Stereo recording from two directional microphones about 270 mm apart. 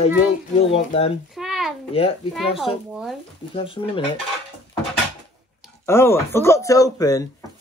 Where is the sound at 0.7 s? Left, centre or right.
Left.